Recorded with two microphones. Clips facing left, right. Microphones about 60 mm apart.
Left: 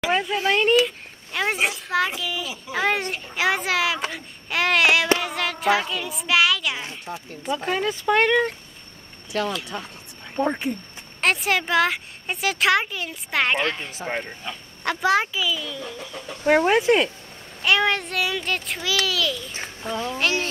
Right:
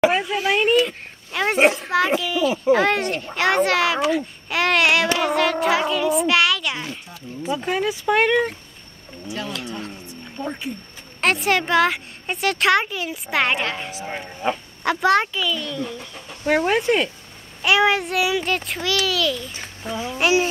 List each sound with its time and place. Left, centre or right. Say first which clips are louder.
0.1 s a child's voice: right 1 dB; centre
9.3 s speech: left 6 dB; left
10.3 s speech: left 6 dB; left
11.1 s a child's voice: right 2 dB; centre